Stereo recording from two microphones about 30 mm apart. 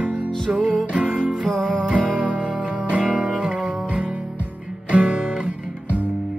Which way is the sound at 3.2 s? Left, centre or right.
Right.